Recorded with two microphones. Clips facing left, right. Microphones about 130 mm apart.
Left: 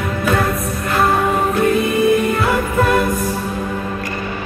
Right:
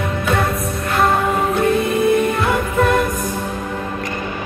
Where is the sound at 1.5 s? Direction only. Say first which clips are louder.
Left 1 dB; centre (ahead or behind).